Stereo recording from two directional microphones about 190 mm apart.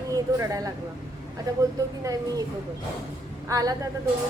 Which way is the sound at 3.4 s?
20° right (ahead or behind).